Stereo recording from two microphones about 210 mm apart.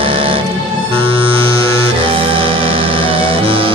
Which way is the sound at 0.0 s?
25° right (ahead or behind).